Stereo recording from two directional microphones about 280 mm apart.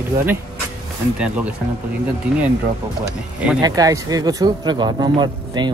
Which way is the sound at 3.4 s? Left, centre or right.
Centre.